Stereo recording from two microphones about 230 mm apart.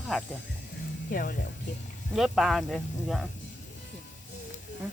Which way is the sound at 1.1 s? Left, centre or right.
Left.